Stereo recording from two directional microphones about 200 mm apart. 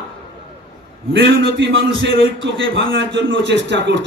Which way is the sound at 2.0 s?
70° right (ahead or behind).